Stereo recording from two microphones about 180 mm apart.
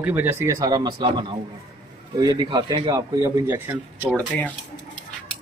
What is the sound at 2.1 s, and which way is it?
A man's voice, 20° right (ahead or behind).